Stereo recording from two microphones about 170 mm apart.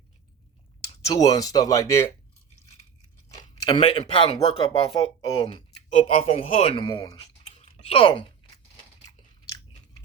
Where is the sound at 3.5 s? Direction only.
30° left (ahead or behind).